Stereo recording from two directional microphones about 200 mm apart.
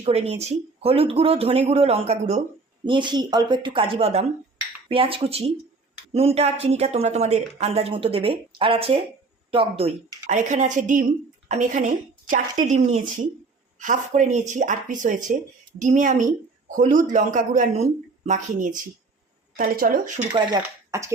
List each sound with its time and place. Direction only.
0.0 s speech: 30° right (ahead or behind)
2.8 s a woman's voice: 25° right (ahead or behind); by 20.2 s 40° right (ahead or behind)
20.6 s speech: 15° right (ahead or behind)